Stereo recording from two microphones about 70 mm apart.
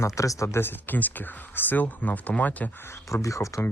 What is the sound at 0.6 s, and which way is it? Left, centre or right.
Speech, left.